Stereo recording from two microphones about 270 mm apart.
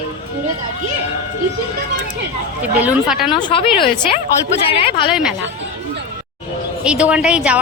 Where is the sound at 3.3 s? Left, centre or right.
Centre.